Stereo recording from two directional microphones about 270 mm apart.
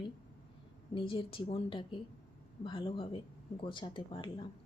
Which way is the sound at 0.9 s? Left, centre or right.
Centre.